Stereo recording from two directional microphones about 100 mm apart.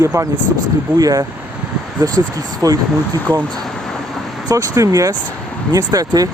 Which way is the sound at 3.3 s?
20° left (ahead or behind).